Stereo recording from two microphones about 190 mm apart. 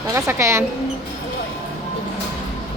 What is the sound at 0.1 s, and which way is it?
Speech, 15° right (ahead or behind).